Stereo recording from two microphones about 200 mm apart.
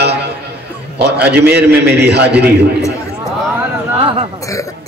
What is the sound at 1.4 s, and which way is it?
Speech, 10° right (ahead or behind).